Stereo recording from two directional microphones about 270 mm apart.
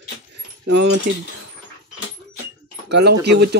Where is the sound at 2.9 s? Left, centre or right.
Right.